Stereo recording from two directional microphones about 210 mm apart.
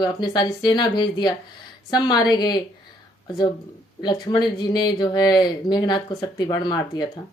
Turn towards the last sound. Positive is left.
turn(degrees=20)  # may be behind; listen again after turning